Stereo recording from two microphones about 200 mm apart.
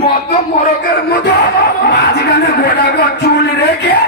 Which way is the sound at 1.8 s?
50° left (ahead or behind).